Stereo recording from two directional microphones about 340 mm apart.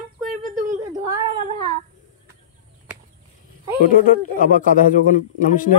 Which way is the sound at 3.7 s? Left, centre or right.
Left.